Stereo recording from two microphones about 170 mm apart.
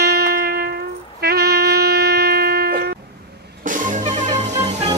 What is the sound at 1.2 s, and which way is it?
Wind instrument, 70° right (ahead or behind).